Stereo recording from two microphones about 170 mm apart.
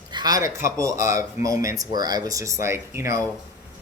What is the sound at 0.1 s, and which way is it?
Speech, 25° right (ahead or behind).